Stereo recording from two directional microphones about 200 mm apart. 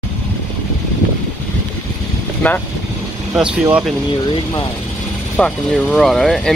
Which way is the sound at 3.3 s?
5° right (ahead or behind).